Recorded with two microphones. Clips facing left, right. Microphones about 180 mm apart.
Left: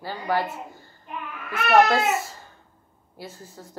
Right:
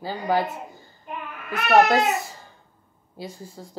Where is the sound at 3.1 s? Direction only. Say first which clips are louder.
Right 3 dB; 15° right (ahead or behind).